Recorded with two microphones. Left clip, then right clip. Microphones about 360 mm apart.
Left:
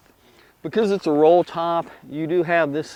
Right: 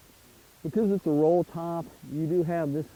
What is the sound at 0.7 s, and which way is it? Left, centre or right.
Speech, centre.